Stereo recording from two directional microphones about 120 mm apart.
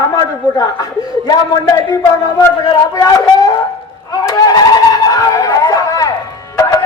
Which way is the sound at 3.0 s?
30° left (ahead or behind).